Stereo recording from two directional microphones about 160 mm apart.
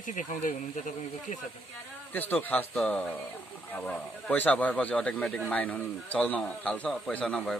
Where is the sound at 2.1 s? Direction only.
10° left (ahead or behind).